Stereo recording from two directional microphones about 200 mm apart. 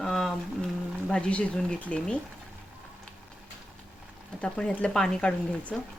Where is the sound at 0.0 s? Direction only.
5° left (ahead or behind).